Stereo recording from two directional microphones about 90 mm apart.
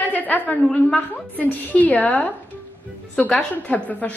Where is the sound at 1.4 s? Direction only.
15° left (ahead or behind).